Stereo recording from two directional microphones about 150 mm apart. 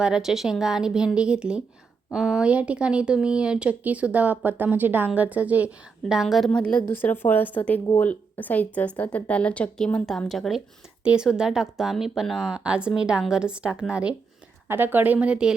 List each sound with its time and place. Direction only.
0.0 s speech: 5° right (ahead or behind)